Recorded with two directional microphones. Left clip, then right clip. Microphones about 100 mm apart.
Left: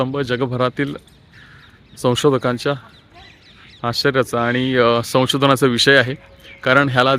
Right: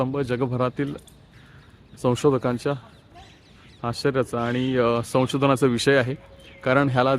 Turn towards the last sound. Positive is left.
turn(degrees=-5)  # may be behind; listen again after turning